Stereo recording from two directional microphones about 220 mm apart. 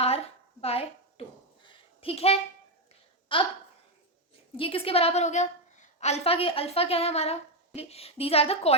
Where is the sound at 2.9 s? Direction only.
25° left (ahead or behind).